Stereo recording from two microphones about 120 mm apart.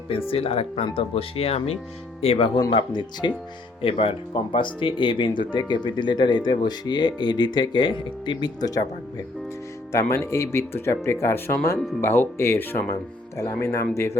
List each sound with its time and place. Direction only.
0.3 s speech: 55° left (ahead or behind)
2.7 s speech: 40° left (ahead or behind)
3.8 s speech: 50° left (ahead or behind); by 14.1 s 25° left (ahead or behind)